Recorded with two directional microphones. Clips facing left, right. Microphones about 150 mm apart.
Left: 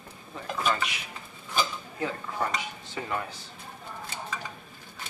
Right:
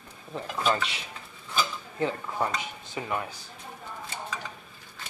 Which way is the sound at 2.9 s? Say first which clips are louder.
Right 1 dB; 15° right (ahead or behind).